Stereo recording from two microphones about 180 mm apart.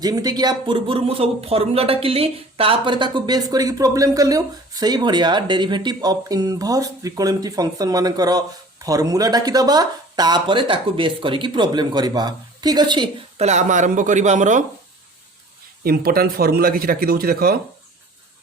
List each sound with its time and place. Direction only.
0.0 s speech: 20° right (ahead or behind)
13.4 s speech: 40° right (ahead or behind)
15.8 s speech: 55° right (ahead or behind)